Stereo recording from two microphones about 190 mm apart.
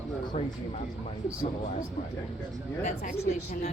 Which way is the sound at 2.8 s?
35° left (ahead or behind).